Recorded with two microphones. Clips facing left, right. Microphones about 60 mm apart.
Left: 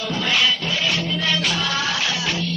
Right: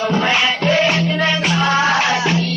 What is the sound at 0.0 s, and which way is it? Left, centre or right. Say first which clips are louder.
Music: right 5 dB; right.